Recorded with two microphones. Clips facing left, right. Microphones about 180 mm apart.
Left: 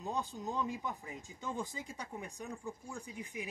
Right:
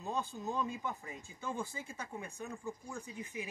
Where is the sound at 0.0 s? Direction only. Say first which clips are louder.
Even; 15° left (ahead or behind).